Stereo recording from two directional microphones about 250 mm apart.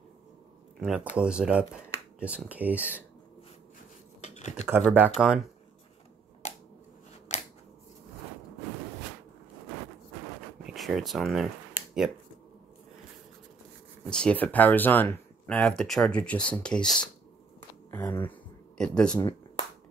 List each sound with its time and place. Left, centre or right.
0.7 s speech: centre
4.2 s computer keyboard: left
4.6 s speech: centre
7.3 s scissors: left
10.6 s speech: centre
14.0 s speech: centre